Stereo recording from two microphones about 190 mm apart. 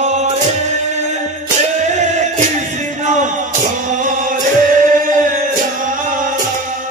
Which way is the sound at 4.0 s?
45° right (ahead or behind).